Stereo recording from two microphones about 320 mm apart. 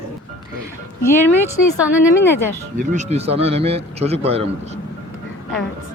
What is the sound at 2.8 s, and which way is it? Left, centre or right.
A man's voice, right.